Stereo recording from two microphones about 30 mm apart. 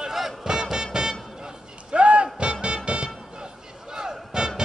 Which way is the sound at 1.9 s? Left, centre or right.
Right.